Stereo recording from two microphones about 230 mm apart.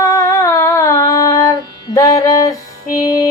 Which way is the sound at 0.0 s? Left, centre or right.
Centre.